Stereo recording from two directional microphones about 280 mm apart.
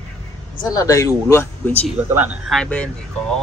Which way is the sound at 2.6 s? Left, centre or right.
Centre.